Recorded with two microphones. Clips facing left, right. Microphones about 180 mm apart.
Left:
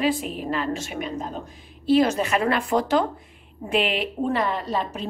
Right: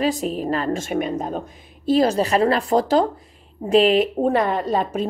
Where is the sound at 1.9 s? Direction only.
35° right (ahead or behind).